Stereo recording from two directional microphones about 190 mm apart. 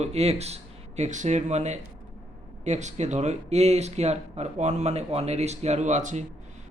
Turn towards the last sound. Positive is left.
turn(degrees=-40)  # may be behind; listen again after turning